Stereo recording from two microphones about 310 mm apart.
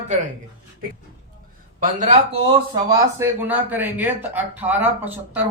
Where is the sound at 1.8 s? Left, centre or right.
Right.